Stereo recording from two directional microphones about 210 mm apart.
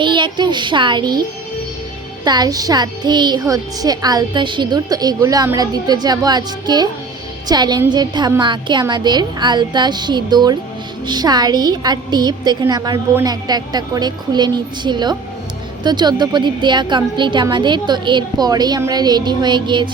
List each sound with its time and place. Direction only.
0.0 s child singing: 20° right (ahead or behind)
2.2 s a child's voice: 20° right (ahead or behind)